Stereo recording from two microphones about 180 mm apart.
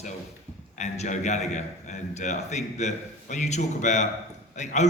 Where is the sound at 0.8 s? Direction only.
40° left (ahead or behind).